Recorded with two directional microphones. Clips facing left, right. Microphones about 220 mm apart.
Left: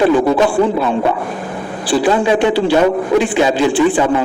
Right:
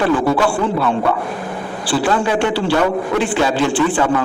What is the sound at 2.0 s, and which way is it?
A man's voice, 15° left (ahead or behind).